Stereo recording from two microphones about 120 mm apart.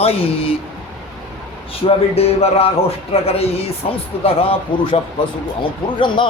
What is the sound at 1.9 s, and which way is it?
Music, 55° left (ahead or behind).